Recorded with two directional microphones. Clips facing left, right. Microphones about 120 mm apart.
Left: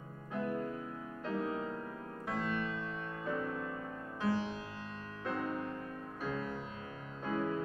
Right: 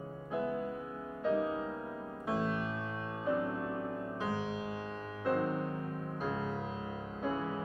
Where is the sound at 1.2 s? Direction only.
15° right (ahead or behind).